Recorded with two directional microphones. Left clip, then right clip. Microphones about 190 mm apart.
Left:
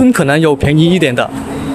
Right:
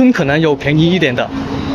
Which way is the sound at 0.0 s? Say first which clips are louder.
Left 2 dB; 20° left (ahead or behind).